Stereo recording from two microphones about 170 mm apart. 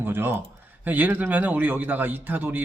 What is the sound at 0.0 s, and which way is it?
Speech, 10° right (ahead or behind).